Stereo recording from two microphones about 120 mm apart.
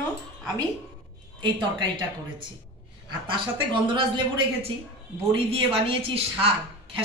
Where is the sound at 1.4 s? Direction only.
40° right (ahead or behind).